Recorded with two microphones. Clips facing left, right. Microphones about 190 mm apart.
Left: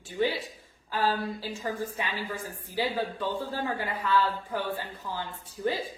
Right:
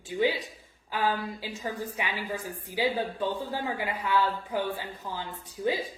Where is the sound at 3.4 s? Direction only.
15° right (ahead or behind).